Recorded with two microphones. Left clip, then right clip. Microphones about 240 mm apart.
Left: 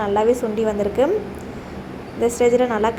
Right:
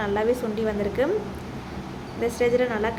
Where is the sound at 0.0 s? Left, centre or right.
Centre.